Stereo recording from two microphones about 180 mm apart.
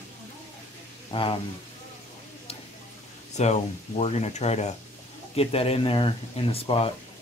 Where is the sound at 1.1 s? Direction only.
25° left (ahead or behind).